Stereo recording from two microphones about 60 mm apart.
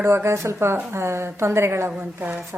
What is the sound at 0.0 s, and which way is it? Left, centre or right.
A woman's voice, right.